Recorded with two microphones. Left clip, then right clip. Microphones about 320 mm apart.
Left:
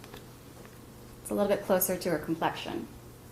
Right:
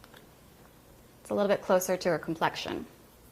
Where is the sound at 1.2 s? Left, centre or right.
Right.